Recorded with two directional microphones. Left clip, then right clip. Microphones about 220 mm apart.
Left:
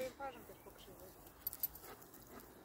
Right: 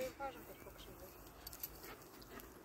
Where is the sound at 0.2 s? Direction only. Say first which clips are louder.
Right 1 dB; 40° left (ahead or behind).